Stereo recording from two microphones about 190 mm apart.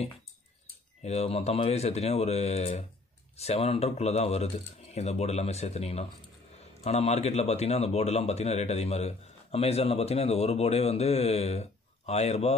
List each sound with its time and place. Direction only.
1.0 s a man's voice: 35° left (ahead or behind)